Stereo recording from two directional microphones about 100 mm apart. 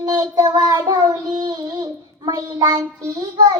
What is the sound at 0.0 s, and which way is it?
Child singing, 40° right (ahead or behind).